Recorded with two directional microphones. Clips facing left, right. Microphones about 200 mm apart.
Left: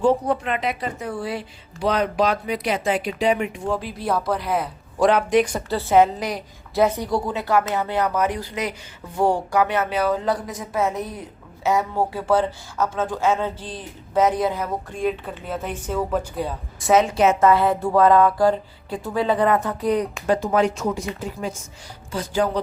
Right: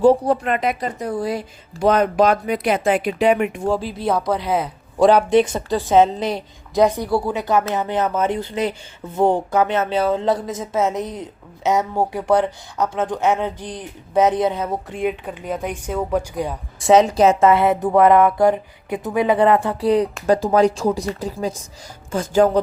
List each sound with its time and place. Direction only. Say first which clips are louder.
0.0 s speech: right 5 dB; 40° right (ahead or behind)
3.7 s a woman's voice: right 2 dB; 30° right (ahead or behind)
6.8 s a woman's voice: right 3 dB; 10° right (ahead or behind)
16.8 s speech: right 4 dB; 35° right (ahead or behind)
17.4 s a woman's voice: right 2 dB; 25° right (ahead or behind)
19.5 s a woman's voice: right 4 dB; 30° right (ahead or behind)
22.1 s speech: right 7 dB; 45° right (ahead or behind)